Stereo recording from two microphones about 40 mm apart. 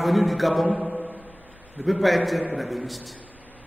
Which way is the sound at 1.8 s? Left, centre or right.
Centre.